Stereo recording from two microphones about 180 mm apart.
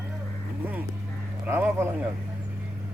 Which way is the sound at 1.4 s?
15° right (ahead or behind).